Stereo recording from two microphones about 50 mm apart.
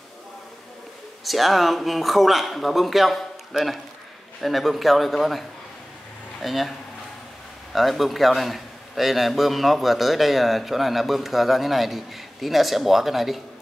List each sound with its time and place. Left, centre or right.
1.2 s a man's voice: centre
6.4 s a man's voice: centre
7.7 s a man's voice: centre